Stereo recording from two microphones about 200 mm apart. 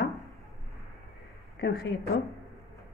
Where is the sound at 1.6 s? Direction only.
55° left (ahead or behind).